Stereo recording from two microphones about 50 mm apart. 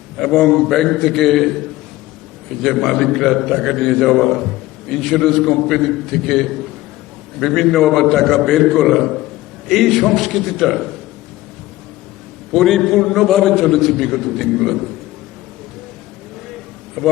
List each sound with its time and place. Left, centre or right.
0.2 s a man's voice: centre
12.5 s a man's voice: centre
17.0 s a man's voice: centre